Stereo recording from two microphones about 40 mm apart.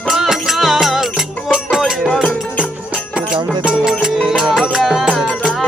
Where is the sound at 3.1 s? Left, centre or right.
Right.